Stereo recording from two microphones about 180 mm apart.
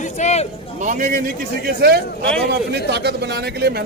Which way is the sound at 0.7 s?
45° right (ahead or behind).